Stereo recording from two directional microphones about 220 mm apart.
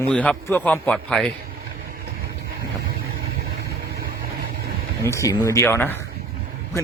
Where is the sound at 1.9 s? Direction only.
45° right (ahead or behind).